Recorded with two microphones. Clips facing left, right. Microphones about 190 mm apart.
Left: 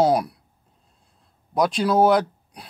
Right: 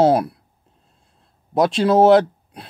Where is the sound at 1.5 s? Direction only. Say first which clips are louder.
Right 4 dB; 25° right (ahead or behind).